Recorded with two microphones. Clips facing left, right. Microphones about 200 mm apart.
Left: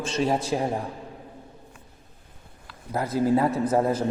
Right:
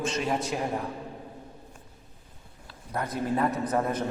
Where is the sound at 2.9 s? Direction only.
25° left (ahead or behind).